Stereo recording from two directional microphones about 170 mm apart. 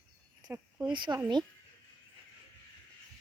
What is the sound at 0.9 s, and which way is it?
Speech, 30° right (ahead or behind).